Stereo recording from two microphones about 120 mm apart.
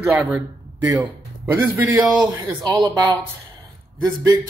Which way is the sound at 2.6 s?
40° right (ahead or behind).